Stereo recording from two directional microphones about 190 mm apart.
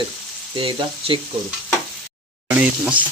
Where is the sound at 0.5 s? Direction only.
30° right (ahead or behind).